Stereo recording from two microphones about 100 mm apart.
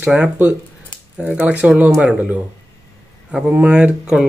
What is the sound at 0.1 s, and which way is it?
Speech, 10° right (ahead or behind).